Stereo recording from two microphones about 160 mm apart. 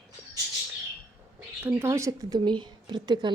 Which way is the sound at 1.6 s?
15° right (ahead or behind).